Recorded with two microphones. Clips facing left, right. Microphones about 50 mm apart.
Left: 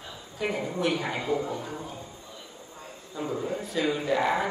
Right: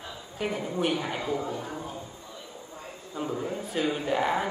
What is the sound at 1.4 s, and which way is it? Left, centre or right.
Speech, centre.